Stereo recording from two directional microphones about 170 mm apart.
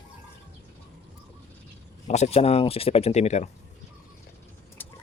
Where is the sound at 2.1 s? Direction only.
40° left (ahead or behind).